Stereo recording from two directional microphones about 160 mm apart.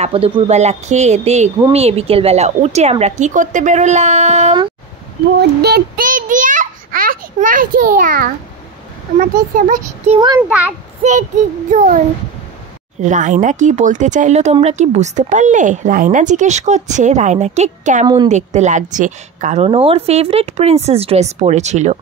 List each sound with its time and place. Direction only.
0.0 s speech: 35° right (ahead or behind)
5.6 s a sound: 80° right; by 8.3 s 60° right (ahead or behind)
9.6 s speech: 55° right (ahead or behind)
10.1 s a woman's voice: 30° right (ahead or behind)
11.0 s speech: 50° right (ahead or behind)
13.0 s speech: 50° right (ahead or behind)
18.0 s a woman's voice: 25° right (ahead or behind)
18.3 s speech: 45° right (ahead or behind)